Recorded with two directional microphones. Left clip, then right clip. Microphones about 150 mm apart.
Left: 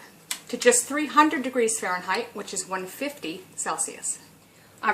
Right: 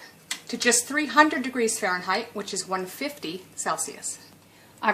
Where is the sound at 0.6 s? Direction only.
60° right (ahead or behind).